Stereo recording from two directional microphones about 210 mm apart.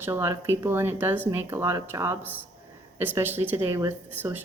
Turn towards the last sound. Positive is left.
turn(degrees=-10)  # may be behind; listen again after turning